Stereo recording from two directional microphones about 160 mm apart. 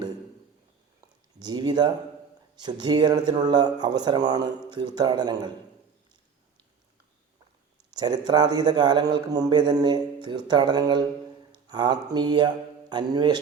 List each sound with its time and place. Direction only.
1.4 s a man's voice: 25° right (ahead or behind)
7.9 s a man's voice: 25° right (ahead or behind)